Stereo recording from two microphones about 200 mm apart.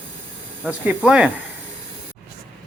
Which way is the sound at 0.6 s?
5° right (ahead or behind).